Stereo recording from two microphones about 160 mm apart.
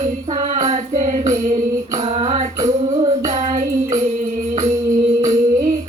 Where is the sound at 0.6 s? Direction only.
50° right (ahead or behind).